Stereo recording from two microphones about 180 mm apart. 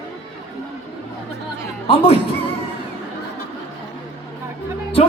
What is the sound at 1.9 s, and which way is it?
Speech, 30° left (ahead or behind).